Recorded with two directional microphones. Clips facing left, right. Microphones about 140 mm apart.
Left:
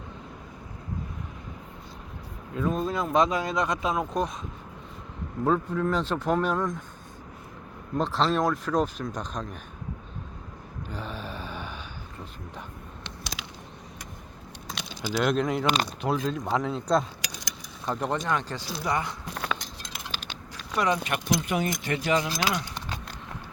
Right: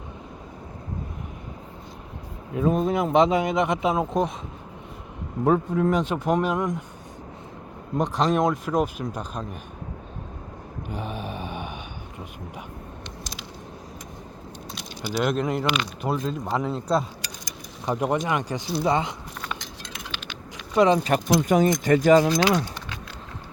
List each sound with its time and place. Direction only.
2.6 s speech: 20° right (ahead or behind)
5.5 s speech: 25° right (ahead or behind)
5.9 s speech: 15° right (ahead or behind)
7.9 s speech: 15° right (ahead or behind)
10.8 s a sound: 15° right (ahead or behind)
15.1 s speech: centre (ahead or behind)
15.6 s speech: 40° left (ahead or behind)
16.0 s speech: centre (ahead or behind)
17.8 s speech: 10° right (ahead or behind)
19.3 s chink: 75° left (ahead or behind)
20.1 s a sound: 35° left (ahead or behind)
20.7 s speech: 25° right (ahead or behind); by 22.3 s 45° right (ahead or behind)